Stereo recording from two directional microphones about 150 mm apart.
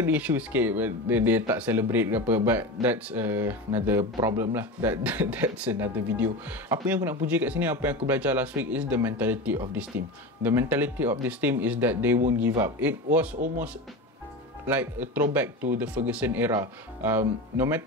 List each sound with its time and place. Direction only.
0.0 s speech: 15° right (ahead or behind)
14.7 s speech: 10° right (ahead or behind)